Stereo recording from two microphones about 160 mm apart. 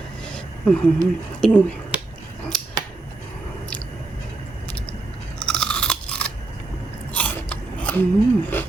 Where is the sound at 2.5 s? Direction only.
Centre (ahead or behind).